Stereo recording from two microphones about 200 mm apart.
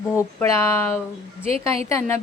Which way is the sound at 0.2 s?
15° left (ahead or behind).